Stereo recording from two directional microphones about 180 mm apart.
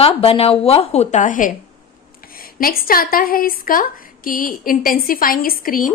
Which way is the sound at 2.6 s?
55° left (ahead or behind).